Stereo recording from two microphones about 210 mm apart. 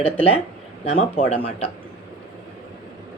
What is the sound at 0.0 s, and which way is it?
A woman's voice, 30° left (ahead or behind).